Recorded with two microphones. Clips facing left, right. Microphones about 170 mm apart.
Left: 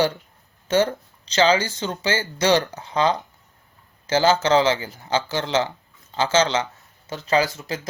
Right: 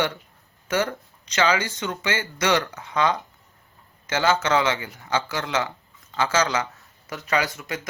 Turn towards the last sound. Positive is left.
turn(degrees=30)  # may be behind; listen again after turning